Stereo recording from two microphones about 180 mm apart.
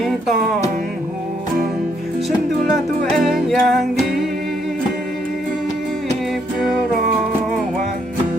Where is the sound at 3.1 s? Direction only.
Centre (ahead or behind).